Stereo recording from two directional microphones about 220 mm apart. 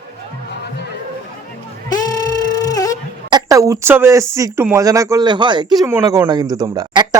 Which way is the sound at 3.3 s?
15° right (ahead or behind).